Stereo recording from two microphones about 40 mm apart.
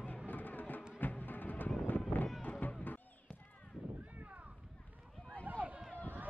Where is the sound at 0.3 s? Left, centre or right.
Left.